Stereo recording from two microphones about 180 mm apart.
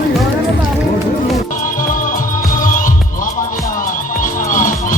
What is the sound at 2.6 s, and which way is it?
Music, 50° left (ahead or behind).